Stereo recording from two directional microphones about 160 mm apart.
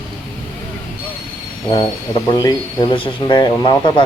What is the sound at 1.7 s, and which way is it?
Speech, 30° left (ahead or behind).